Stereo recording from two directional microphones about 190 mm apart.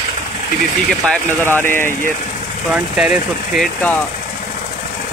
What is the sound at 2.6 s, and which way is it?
Speech, 5° right (ahead or behind).